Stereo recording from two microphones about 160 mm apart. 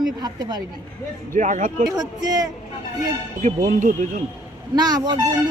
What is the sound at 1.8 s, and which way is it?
Speech, 25° right (ahead or behind).